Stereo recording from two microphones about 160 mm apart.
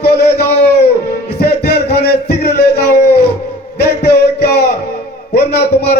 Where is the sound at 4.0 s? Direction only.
90° left.